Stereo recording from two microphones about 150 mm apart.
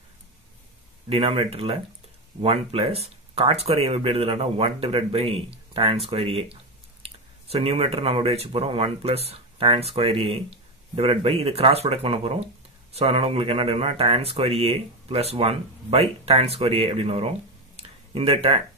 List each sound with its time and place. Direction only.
1.0 s speech: 40° right (ahead or behind)